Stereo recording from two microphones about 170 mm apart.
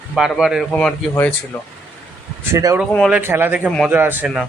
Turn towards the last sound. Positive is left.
turn(degrees=-5)  # may be behind; listen again after turning